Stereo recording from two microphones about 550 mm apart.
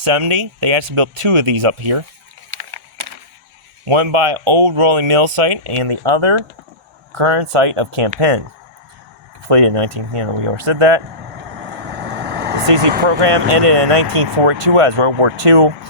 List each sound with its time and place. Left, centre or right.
0.0 s speech: right
3.8 s speech: right
9.5 s speech: right
12.0 s vehicle: centre
13.1 s speech: right